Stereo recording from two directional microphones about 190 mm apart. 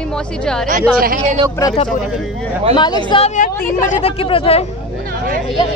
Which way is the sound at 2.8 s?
25° left (ahead or behind).